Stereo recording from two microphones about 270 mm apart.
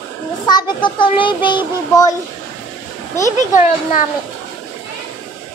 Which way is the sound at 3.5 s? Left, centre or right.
Left.